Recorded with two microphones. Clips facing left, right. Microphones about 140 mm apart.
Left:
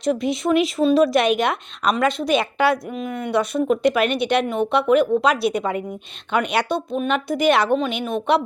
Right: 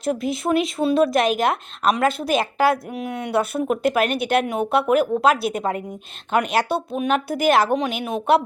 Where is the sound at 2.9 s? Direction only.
70° right (ahead or behind).